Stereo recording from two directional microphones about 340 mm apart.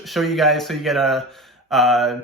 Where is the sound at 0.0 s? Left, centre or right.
Centre.